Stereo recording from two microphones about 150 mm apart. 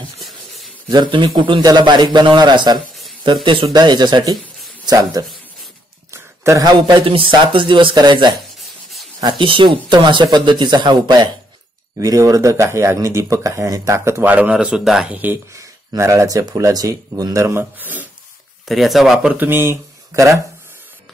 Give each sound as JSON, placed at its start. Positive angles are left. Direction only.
{"t": 0.8, "sound": "speech", "side_deg": -30}
{"t": 18.7, "sound": "speech", "side_deg": 0}
{"t": 19.1, "sound": "speech", "side_deg": -15}